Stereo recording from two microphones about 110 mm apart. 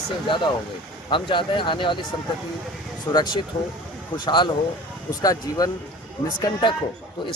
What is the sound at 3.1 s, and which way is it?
Speech, 25° left (ahead or behind).